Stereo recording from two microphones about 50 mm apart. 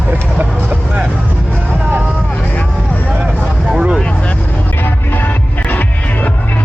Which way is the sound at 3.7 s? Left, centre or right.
Right.